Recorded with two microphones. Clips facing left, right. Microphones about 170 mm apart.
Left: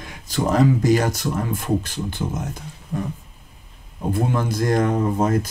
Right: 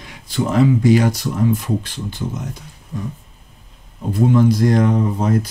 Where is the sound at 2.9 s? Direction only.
60° left (ahead or behind).